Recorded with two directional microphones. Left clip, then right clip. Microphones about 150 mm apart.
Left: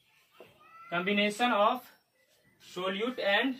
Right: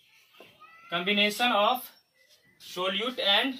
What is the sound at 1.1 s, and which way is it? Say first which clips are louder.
Speech: right 4 dB; 20° left (ahead or behind).